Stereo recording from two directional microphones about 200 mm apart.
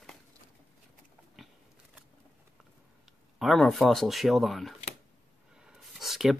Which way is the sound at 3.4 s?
Centre (ahead or behind).